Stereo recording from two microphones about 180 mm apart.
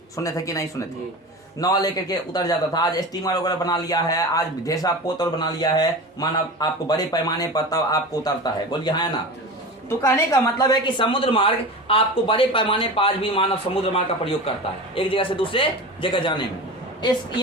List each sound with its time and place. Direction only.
0.2 s speech: 20° left (ahead or behind)